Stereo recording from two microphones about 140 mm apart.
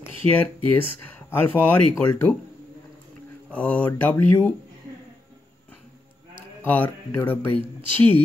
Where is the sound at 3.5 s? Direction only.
10° left (ahead or behind).